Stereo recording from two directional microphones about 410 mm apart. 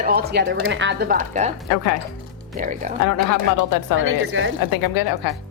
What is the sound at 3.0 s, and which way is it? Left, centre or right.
Speech, left.